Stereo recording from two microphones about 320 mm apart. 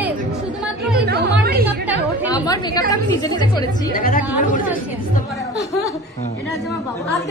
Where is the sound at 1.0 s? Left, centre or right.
Right.